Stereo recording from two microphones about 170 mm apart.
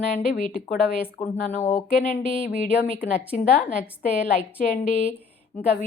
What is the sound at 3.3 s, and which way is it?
Speech, 55° left (ahead or behind).